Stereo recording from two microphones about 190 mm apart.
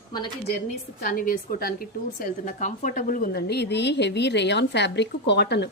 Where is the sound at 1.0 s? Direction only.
50° left (ahead or behind).